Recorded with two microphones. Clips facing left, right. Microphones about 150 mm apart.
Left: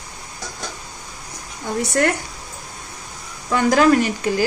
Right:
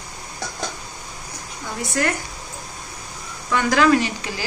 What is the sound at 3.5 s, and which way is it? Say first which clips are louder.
Speech: left 2 dB; 40° left (ahead or behind).